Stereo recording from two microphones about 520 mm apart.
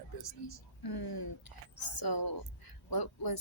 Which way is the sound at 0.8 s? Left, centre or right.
Left.